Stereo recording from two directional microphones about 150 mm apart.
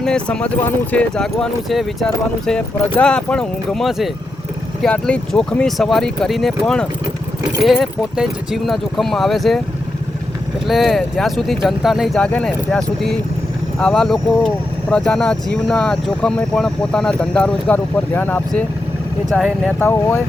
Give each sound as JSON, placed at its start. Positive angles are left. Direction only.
{"t": 0.0, "sound": "speech", "side_deg": 5}
{"t": 10.7, "sound": "speech", "side_deg": 0}
{"t": 19.3, "sound": "speech", "side_deg": 0}
{"t": 19.8, "sound": "speech", "side_deg": 15}